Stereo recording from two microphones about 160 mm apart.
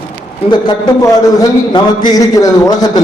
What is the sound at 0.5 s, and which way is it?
A man's voice, 25° left (ahead or behind).